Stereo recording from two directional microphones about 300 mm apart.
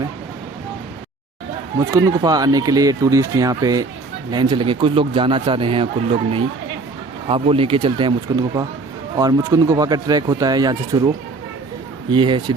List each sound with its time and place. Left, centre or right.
1.8 s a man's voice: centre
12.1 s a man's voice: centre